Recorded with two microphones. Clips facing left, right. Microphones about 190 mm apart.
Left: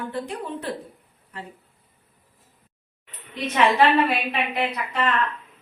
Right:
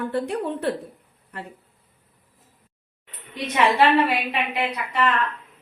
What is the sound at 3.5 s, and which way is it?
Speech, 10° right (ahead or behind).